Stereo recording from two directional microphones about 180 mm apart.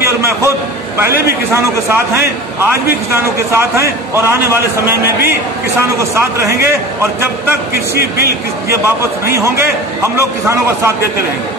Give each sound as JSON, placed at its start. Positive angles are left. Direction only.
{"t": 0.0, "sound": "a sound", "side_deg": -15}
{"t": 0.9, "sound": "a man's voice", "side_deg": -15}
{"t": 8.6, "sound": "a man's voice", "side_deg": -15}